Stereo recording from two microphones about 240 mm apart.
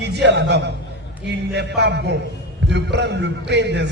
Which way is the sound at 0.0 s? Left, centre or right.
Right.